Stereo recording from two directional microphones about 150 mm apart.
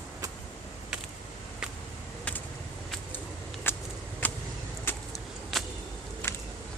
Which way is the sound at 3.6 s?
15° left (ahead or behind).